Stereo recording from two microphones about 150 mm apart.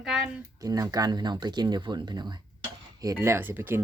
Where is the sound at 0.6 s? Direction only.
25° right (ahead or behind).